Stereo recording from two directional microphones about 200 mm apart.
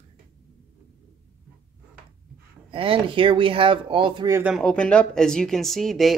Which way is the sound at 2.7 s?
25° right (ahead or behind).